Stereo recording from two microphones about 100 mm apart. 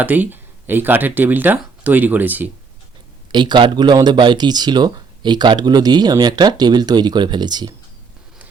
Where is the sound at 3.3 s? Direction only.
50° right (ahead or behind).